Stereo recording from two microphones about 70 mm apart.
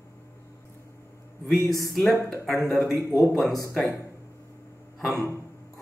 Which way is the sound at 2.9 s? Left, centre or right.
Left.